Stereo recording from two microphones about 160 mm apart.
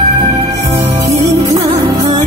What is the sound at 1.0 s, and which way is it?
Music, 20° right (ahead or behind).